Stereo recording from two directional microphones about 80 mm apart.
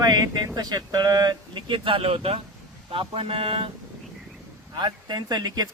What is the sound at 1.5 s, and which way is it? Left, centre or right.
Speech, right.